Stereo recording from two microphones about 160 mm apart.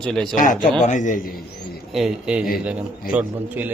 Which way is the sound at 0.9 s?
50° left (ahead or behind).